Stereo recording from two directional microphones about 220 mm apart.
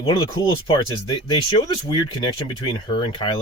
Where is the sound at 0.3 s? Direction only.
20° left (ahead or behind).